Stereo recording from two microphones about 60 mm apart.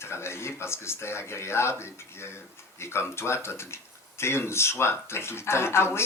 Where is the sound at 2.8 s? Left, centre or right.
Left.